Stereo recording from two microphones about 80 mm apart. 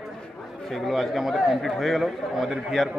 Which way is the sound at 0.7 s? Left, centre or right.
Centre.